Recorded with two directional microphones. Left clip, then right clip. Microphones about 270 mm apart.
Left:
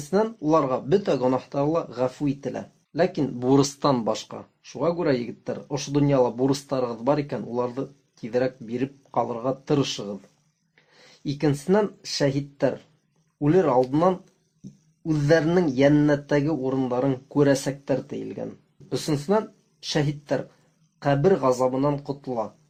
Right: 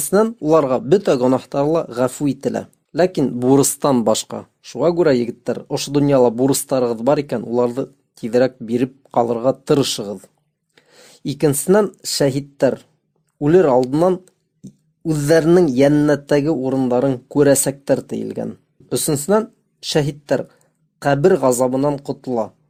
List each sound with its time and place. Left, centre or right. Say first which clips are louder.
0.1 s speech: right 7 dB; right